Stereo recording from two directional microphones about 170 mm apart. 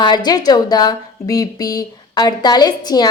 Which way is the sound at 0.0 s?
25° left (ahead or behind).